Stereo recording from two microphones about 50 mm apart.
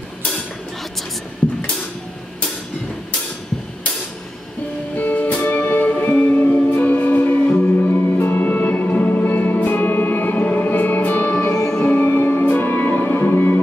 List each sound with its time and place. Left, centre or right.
4.9 s music: left
12.4 s music: left